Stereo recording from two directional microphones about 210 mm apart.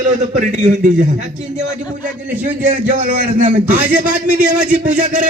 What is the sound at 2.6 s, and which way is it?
A man's voice, 40° right (ahead or behind).